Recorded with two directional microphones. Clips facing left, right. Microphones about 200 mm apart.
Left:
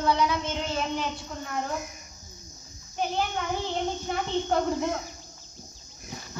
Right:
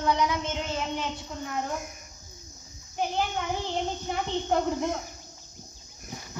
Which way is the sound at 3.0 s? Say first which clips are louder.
Even; 15° right (ahead or behind).